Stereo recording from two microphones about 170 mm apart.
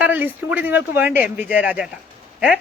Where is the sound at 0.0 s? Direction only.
10° right (ahead or behind).